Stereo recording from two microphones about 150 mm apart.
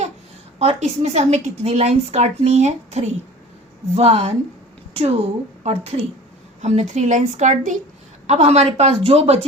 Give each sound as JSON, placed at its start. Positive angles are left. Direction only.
{"t": 0.6, "sound": "a woman's voice", "side_deg": -45}